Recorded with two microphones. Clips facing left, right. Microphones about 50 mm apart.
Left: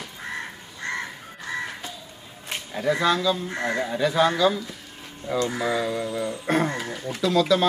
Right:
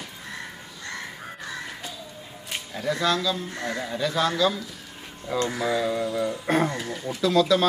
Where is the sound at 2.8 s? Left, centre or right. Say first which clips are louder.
Left 3 dB; centre.